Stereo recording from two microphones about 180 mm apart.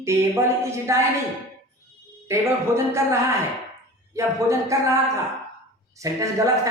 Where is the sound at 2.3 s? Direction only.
15° right (ahead or behind).